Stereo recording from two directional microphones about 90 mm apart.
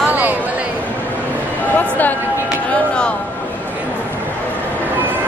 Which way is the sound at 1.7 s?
20° left (ahead or behind).